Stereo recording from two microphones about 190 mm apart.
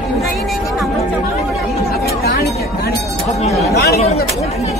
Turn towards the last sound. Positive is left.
turn(degrees=55)  # may be behind; listen again after turning